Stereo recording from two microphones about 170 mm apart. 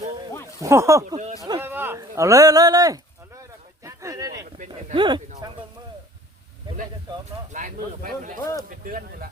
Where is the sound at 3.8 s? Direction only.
20° right (ahead or behind).